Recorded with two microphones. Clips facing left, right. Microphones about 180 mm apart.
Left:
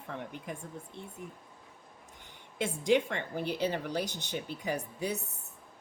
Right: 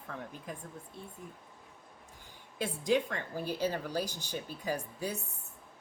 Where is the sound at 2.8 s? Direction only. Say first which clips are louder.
Left 3 dB; 25° left (ahead or behind).